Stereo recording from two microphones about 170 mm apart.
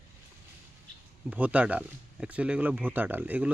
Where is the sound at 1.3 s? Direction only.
10° right (ahead or behind).